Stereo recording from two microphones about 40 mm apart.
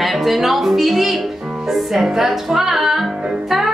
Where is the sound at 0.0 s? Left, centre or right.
Centre.